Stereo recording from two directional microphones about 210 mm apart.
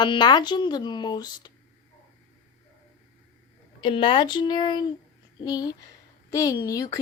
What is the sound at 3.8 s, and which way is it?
Speech, 25° left (ahead or behind).